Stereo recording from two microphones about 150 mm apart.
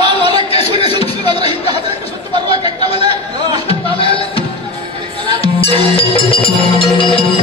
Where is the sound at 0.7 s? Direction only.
30° right (ahead or behind).